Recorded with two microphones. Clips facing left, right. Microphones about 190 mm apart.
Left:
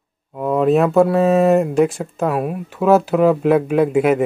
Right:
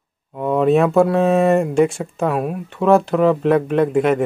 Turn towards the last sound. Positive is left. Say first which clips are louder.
# left 1 dB
turn(degrees=5)  # may be behind; listen again after turning